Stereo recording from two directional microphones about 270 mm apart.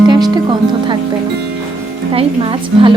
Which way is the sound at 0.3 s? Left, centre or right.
Centre.